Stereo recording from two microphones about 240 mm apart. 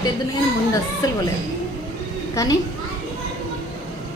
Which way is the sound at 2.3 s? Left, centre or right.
Centre.